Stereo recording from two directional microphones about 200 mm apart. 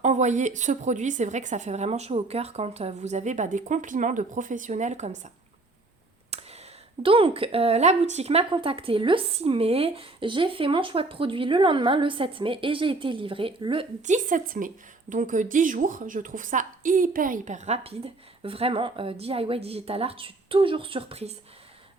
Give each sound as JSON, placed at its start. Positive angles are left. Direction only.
{"t": 0.0, "sound": "a woman's voice", "side_deg": -35}
{"t": 6.3, "sound": "a sound", "side_deg": -30}
{"t": 7.0, "sound": "speech", "side_deg": -25}
{"t": 14.0, "sound": "a woman's voice", "side_deg": -40}